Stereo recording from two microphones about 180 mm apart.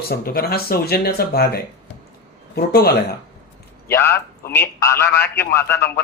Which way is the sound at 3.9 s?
15° left (ahead or behind).